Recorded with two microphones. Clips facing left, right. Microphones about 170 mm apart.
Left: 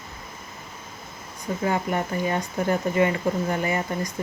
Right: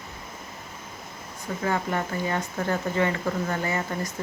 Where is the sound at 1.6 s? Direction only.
15° left (ahead or behind).